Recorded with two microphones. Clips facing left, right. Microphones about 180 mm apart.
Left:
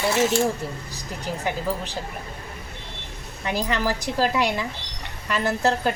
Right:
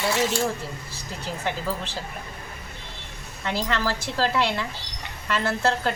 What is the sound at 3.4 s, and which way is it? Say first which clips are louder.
Speech: left 2 dB; 15° left (ahead or behind).